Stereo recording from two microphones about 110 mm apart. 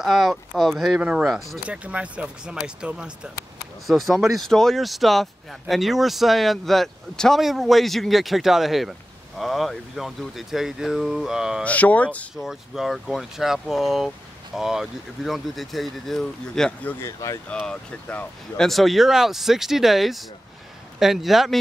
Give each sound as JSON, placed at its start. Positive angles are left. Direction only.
{"t": 0.0, "sound": "speech", "side_deg": 0}
{"t": 11.6, "sound": "speech", "side_deg": 15}
{"t": 12.4, "sound": "speech", "side_deg": 0}
{"t": 17.0, "sound": "speech", "side_deg": 25}
{"t": 17.5, "sound": "speech", "side_deg": 10}